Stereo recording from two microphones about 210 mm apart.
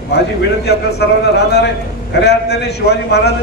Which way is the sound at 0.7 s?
50° left (ahead or behind).